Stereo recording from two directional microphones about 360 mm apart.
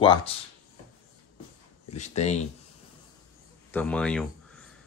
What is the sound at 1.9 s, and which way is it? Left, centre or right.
Speech, centre.